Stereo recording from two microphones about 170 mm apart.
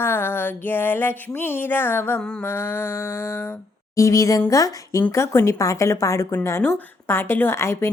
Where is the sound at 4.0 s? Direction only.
20° left (ahead or behind).